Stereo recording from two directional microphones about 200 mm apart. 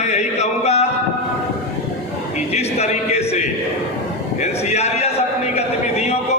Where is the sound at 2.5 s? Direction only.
35° left (ahead or behind).